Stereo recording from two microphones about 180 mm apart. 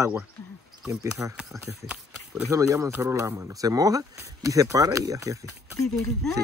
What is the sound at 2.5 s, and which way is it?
Speech, 15° right (ahead or behind).